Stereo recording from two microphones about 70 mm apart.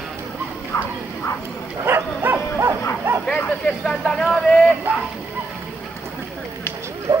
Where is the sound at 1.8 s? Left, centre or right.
Right.